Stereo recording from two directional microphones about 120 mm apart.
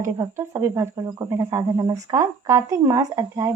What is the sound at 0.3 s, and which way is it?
A woman's voice, 25° right (ahead or behind).